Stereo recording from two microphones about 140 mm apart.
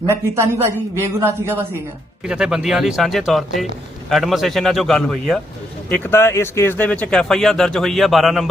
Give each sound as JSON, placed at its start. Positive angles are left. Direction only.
{"t": 0.1, "sound": "a man's voice", "side_deg": -20}
{"t": 2.2, "sound": "speech", "side_deg": -5}
{"t": 5.9, "sound": "speech", "side_deg": 15}